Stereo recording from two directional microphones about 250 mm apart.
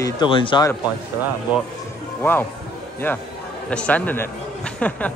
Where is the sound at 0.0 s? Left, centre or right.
Centre.